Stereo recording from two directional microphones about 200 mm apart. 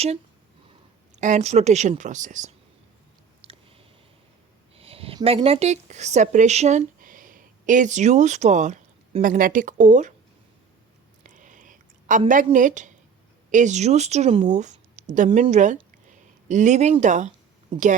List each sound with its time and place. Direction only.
1.1 s speech: 35° right (ahead or behind)
3.4 s a sound: 25° right (ahead or behind)
4.7 s speech: 30° right (ahead or behind)
11.2 s whispering: 40° right (ahead or behind)
12.3 s speech: 40° right (ahead or behind)